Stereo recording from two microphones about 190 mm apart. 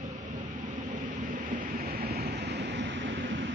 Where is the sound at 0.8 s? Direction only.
45° right (ahead or behind); by 3.4 s 65° right (ahead or behind).